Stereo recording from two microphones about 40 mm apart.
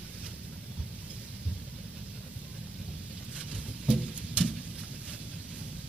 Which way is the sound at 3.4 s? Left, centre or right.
Centre.